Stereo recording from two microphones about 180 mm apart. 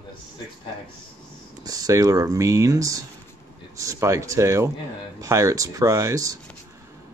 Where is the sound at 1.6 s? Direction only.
20° right (ahead or behind).